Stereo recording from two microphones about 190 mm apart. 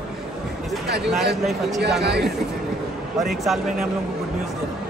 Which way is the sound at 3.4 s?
Centre (ahead or behind).